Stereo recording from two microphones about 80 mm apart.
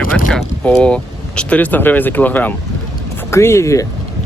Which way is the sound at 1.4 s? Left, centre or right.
Centre.